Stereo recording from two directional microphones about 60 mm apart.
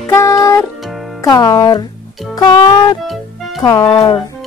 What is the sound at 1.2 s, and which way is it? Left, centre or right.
Speech, left.